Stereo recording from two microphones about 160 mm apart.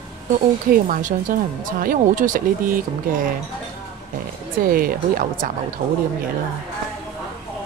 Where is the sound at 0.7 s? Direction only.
60° right (ahead or behind).